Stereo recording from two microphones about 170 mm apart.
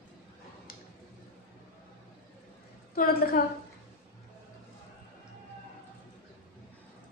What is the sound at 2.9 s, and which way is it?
Speech, 60° left (ahead or behind).